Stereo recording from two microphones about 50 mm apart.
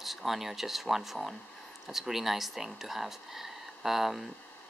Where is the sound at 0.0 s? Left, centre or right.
Centre.